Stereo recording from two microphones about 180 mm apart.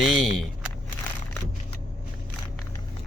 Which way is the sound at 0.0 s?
Centre (ahead or behind).